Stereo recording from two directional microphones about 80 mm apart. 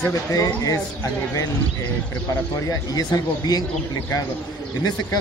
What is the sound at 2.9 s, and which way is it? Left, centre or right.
Speech, left.